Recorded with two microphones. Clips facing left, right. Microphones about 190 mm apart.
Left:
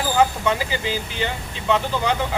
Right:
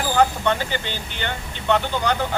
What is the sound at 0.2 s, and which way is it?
Speech, 5° left (ahead or behind).